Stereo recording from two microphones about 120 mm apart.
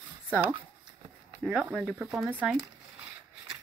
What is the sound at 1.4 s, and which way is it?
Speech, 15° right (ahead or behind).